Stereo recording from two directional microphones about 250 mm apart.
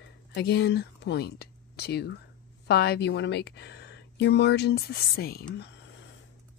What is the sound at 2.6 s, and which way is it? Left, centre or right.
Speech, left.